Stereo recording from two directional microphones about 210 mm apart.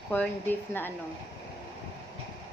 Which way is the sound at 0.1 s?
10° left (ahead or behind).